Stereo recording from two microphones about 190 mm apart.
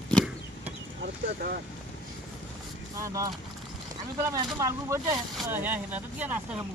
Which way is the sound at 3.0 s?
15° right (ahead or behind).